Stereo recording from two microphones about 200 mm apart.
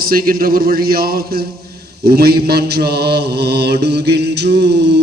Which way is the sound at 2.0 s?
50° right (ahead or behind).